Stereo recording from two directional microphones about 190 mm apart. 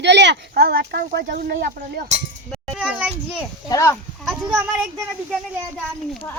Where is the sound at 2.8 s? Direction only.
5° right (ahead or behind).